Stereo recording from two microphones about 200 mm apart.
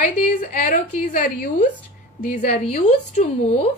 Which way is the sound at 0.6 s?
45° left (ahead or behind).